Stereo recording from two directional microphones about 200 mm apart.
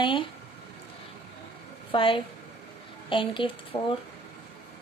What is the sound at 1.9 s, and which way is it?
A woman's voice, 25° left (ahead or behind).